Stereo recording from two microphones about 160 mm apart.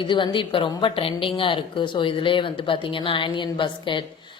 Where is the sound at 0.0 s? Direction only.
30° left (ahead or behind).